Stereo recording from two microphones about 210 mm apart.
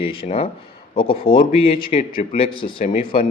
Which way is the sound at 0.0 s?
25° left (ahead or behind).